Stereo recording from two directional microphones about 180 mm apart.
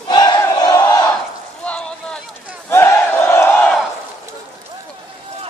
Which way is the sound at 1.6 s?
5° left (ahead or behind).